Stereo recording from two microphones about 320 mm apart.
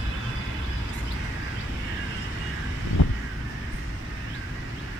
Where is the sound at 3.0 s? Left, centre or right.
Left.